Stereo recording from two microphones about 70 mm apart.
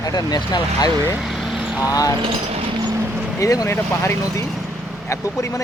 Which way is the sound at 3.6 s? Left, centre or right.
Left.